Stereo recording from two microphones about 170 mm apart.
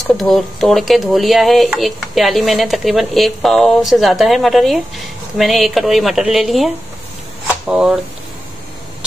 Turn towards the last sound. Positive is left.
turn(degrees=-5)  # may be behind; listen again after turning